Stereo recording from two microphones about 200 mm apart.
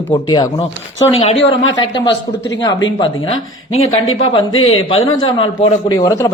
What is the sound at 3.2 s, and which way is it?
A man's voice, 85° left.